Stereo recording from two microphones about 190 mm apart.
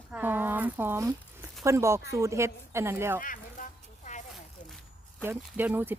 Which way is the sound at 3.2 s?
45° left (ahead or behind).